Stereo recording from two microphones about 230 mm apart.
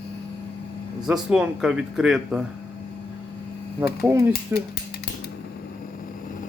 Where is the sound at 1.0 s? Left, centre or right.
Centre.